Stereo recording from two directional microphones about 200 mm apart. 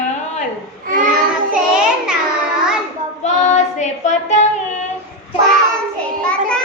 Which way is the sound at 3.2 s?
35° left (ahead or behind).